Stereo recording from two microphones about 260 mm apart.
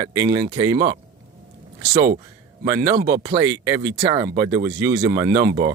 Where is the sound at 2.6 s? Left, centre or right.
Centre.